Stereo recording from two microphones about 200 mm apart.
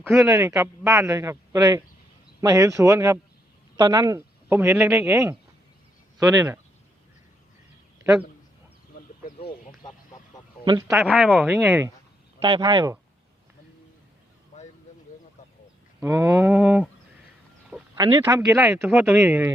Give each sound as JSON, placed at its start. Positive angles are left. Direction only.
{"t": 0.1, "sound": "speech", "side_deg": 0}
{"t": 0.3, "sound": "speech", "side_deg": -15}
{"t": 10.7, "sound": "speech", "side_deg": -15}
{"t": 12.4, "sound": "speech", "side_deg": -25}
{"t": 16.0, "sound": "speech", "side_deg": -15}
{"t": 17.9, "sound": "speech", "side_deg": -20}
{"t": 18.4, "sound": "speech", "side_deg": 0}
{"t": 18.8, "sound": "speech", "side_deg": -10}